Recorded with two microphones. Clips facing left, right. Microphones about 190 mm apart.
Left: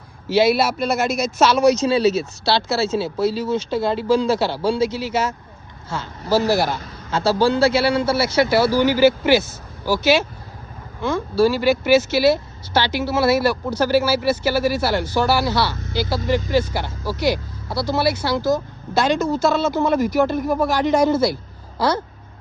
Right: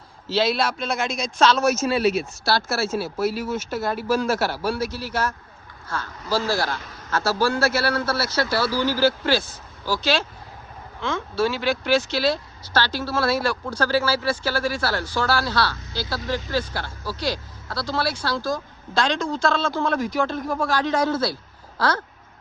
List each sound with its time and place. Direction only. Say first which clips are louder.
0.3 s speech: left 6 dB; 10° left (ahead or behind)
2.5 s a man's voice: left 4 dB; 25° left (ahead or behind)
6.3 s a man's voice: left 6 dB; 20° left (ahead or behind)
18.9 s speech: left 5 dB; 5° left (ahead or behind)